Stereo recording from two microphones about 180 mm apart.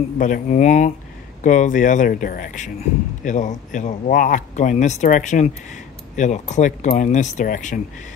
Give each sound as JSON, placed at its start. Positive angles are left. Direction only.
{"t": 0.2, "sound": "speech", "side_deg": 45}